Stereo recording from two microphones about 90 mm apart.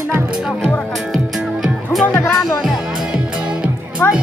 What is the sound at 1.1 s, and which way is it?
Music, centre (ahead or behind).